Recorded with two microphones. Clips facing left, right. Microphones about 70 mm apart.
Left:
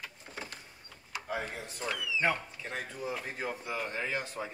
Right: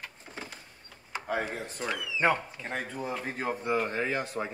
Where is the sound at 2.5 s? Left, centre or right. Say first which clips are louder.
Right 4 dB; right.